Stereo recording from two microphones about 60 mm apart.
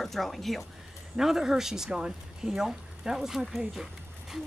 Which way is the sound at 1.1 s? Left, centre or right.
Centre.